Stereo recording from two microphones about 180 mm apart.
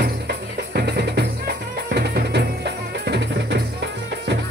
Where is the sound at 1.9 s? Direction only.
65° right (ahead or behind).